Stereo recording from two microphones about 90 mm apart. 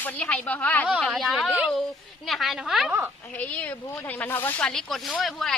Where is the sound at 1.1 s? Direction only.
Centre (ahead or behind).